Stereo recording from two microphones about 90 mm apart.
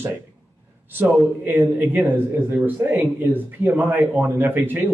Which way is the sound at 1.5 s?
20° right (ahead or behind).